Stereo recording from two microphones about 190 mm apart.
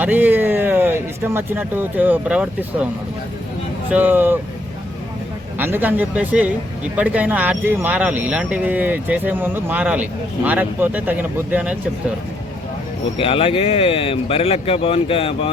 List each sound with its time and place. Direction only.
0.0 s speech: 10° right (ahead or behind)
3.8 s speech: 10° right (ahead or behind)
5.5 s speech: 10° right (ahead or behind)
13.1 s speech: 30° left (ahead or behind)